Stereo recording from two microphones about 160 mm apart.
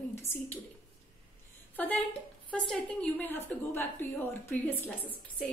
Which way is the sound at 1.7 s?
10° left (ahead or behind).